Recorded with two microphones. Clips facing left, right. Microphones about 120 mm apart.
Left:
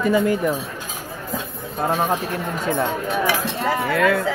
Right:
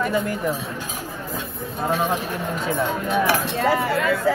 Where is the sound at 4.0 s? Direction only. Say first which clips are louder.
Left 4 dB; 65° left (ahead or behind).